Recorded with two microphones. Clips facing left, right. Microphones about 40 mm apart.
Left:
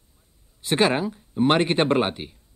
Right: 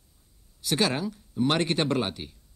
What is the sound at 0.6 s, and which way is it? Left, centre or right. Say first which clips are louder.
Speech: left 5 dB; left.